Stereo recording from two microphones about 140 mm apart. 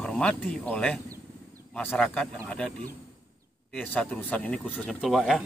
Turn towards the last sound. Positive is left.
turn(degrees=0)  # may be behind; listen again after turning